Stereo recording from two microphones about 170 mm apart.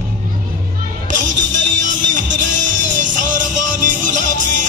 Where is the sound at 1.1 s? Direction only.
45° right (ahead or behind).